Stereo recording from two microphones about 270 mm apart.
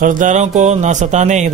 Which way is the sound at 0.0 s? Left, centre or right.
Right.